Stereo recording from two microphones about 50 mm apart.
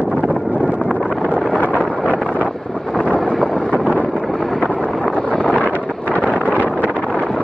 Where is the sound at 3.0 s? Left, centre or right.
Left.